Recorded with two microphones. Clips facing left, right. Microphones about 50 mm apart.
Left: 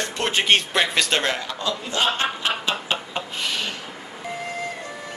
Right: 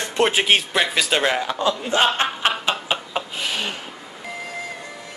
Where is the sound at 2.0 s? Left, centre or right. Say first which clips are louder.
Right 2 dB; right.